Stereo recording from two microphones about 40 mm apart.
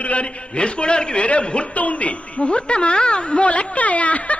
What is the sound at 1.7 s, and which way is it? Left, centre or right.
Music, left.